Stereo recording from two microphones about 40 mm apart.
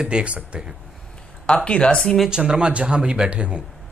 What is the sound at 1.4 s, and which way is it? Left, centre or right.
Speech, left.